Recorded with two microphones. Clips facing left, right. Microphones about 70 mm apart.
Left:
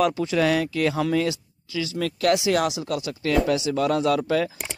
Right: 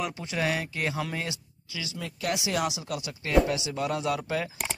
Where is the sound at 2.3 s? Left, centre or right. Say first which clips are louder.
Left 7 dB; left.